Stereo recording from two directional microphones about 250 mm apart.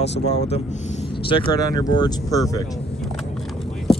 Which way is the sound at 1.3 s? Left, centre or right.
Centre.